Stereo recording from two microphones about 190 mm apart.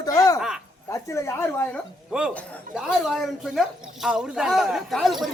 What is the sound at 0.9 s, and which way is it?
Speech, 15° left (ahead or behind).